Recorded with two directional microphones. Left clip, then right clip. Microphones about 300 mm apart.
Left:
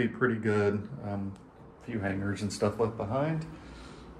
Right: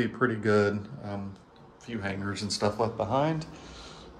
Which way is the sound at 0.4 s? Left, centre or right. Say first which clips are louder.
Right 3 dB; centre.